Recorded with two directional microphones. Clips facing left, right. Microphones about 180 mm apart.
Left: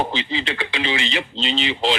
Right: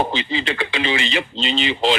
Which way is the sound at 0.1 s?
50° right (ahead or behind).